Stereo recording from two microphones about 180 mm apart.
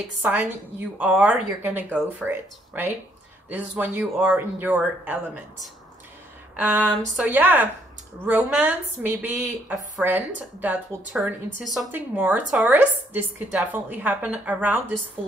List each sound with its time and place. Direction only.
0.2 s speech: 10° right (ahead or behind)
6.5 s a sound: 5° right (ahead or behind)
7.2 s speech: 10° right (ahead or behind)